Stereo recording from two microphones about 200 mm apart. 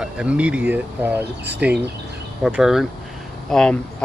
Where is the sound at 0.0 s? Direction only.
5° right (ahead or behind).